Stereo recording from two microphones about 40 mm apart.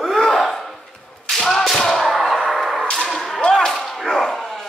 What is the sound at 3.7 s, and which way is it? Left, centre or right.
Whip, centre.